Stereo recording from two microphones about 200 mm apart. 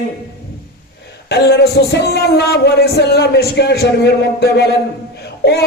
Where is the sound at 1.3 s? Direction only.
55° left (ahead or behind).